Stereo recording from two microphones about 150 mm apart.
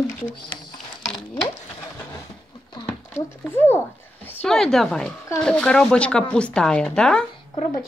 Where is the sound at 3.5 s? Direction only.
15° left (ahead or behind).